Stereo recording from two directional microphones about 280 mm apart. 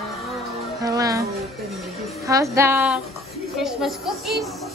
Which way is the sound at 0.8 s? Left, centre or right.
Centre.